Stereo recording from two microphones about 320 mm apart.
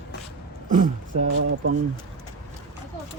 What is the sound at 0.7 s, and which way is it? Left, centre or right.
Speech, right.